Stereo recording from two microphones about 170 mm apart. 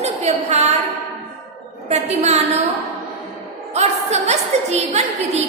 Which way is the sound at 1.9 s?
40° right (ahead or behind).